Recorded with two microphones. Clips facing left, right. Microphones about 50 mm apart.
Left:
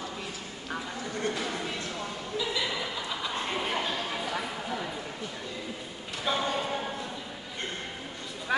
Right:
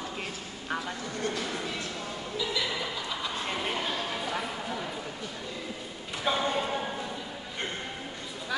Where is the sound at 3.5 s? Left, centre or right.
Centre.